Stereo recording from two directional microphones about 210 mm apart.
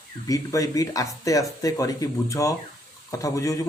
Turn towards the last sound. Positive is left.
turn(degrees=15)  # may be behind; listen again after turning